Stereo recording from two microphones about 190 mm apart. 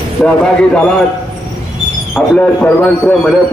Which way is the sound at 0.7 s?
5° left (ahead or behind).